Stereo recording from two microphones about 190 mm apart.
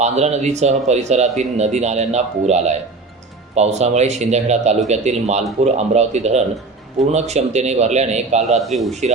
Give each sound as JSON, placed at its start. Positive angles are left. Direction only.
{"t": 0.0, "sound": "a man's voice", "side_deg": -35}
{"t": 8.4, "sound": "a man's voice", "side_deg": 0}
{"t": 8.9, "sound": "a man's voice", "side_deg": -35}